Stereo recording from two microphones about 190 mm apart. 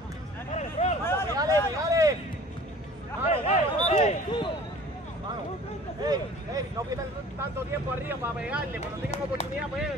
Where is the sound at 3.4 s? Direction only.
35° left (ahead or behind).